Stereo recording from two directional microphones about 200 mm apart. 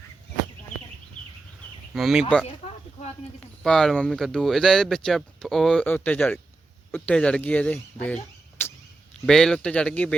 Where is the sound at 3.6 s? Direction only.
Centre (ahead or behind).